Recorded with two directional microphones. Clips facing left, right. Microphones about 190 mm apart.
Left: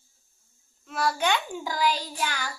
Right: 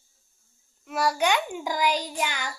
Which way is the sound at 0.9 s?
10° right (ahead or behind).